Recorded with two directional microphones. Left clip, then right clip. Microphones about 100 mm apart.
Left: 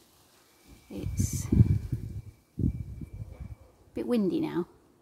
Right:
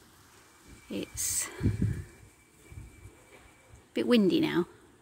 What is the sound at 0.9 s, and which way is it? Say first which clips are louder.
Speech: right 3 dB; 15° right (ahead or behind).